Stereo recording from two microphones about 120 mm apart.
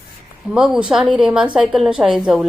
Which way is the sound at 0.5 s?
5° right (ahead or behind).